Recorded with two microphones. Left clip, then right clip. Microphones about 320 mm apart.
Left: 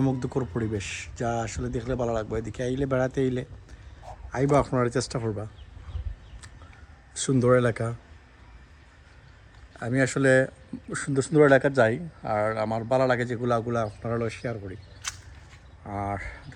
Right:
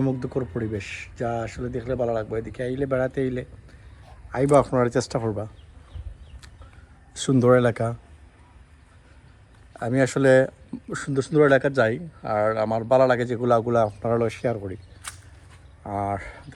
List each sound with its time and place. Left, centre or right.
0.0 s speech: centre
7.1 s speech: centre
9.7 s speech: centre